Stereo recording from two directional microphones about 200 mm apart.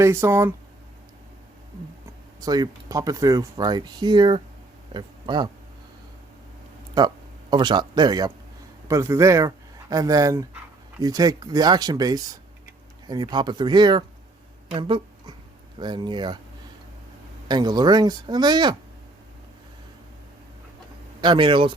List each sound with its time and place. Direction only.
0.0 s a man's voice: 15° right (ahead or behind)
2.4 s speech: 20° right (ahead or behind)
7.5 s a man's voice: 20° right (ahead or behind)
14.7 s a sound: 25° right (ahead or behind)
15.8 s speech: 25° right (ahead or behind)
17.5 s speech: 20° right (ahead or behind)
21.2 s speech: 25° right (ahead or behind)